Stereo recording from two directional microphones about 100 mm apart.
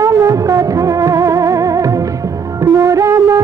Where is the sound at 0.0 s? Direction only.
35° right (ahead or behind).